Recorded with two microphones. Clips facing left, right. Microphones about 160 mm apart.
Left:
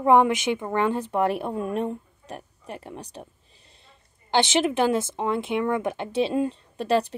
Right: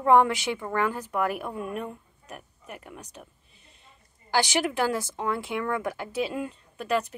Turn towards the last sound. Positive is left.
turn(degrees=30)  # may be behind; listen again after turning